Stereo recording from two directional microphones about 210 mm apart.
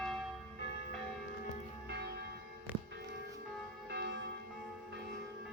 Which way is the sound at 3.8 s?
55° right (ahead or behind).